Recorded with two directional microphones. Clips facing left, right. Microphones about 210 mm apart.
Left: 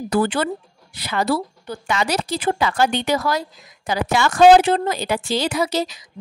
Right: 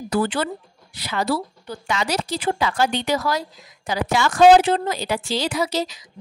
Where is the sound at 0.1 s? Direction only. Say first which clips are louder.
Left 2 dB; 50° left (ahead or behind).